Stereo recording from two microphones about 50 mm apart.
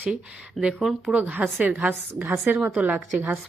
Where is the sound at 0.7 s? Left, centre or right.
Centre.